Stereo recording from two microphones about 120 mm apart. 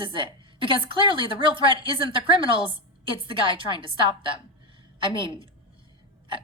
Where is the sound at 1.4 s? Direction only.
45° right (ahead or behind).